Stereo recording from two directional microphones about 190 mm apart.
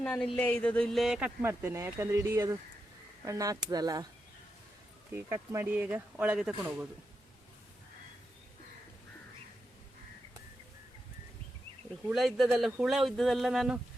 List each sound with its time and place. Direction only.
0.0 s speech: 5° left (ahead or behind); by 4.0 s 20° right (ahead or behind)
5.1 s speech: 15° right (ahead or behind)
12.0 s speech: centre (ahead or behind)